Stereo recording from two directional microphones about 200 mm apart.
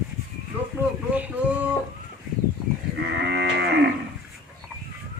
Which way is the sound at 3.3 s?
60° right (ahead or behind).